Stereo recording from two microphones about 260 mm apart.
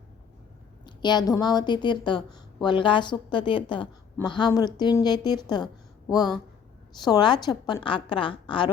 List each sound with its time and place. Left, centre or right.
0.9 s a woman's voice: centre